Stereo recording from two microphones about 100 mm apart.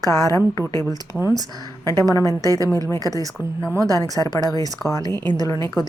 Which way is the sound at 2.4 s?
35° right (ahead or behind).